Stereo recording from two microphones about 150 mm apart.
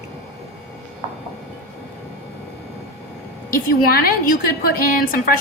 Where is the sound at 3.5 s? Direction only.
85° left.